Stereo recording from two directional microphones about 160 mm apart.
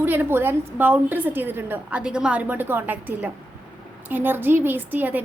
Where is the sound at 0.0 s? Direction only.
10° right (ahead or behind).